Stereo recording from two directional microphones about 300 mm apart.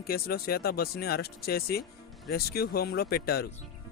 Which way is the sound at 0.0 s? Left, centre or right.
Left.